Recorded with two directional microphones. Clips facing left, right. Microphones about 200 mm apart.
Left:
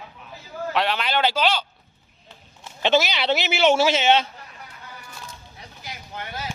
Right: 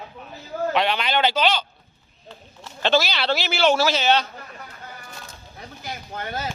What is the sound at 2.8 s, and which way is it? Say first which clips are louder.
A man's voice: left 1 dB; 20° left (ahead or behind).